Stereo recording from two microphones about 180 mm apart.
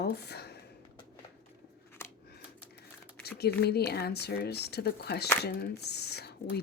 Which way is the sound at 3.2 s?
65° left (ahead or behind).